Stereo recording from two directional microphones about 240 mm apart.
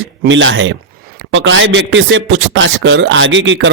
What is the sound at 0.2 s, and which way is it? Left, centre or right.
A man's voice, right.